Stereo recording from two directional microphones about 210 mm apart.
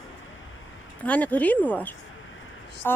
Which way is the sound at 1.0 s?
5° left (ahead or behind).